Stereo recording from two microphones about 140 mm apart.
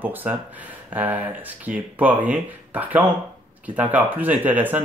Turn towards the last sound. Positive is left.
turn(degrees=-10)  # may be behind; listen again after turning